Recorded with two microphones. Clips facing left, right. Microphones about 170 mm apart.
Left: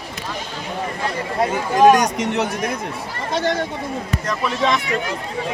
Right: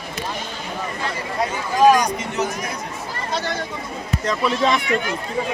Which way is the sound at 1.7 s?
70° left (ahead or behind).